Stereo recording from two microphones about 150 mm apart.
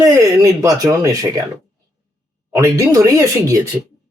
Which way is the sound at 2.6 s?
20° right (ahead or behind).